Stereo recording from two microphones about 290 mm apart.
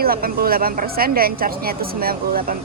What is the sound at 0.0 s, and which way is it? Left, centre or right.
A woman's voice, right.